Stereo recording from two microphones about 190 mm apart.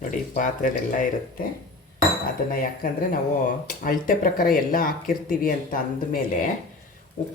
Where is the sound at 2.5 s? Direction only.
50° left (ahead or behind).